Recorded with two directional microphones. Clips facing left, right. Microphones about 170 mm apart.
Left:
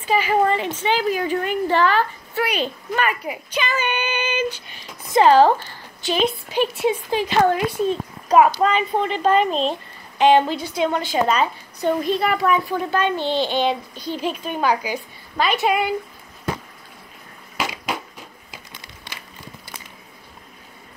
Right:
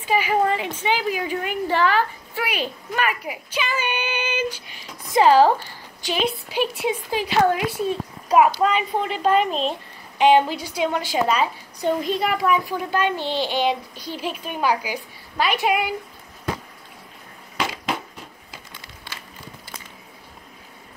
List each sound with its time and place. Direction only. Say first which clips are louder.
0.0 s a woman's voice: left 2 dB; 10° right (ahead or behind)
17.6 s crushing: even; 10° left (ahead or behind)
18.5 s a sound: left 1 dB; 15° left (ahead or behind)